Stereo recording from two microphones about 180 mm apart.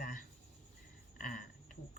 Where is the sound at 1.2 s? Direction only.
50° left (ahead or behind).